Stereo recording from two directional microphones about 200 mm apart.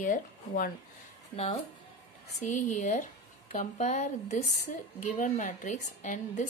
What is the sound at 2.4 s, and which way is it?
A woman's voice, 35° left (ahead or behind).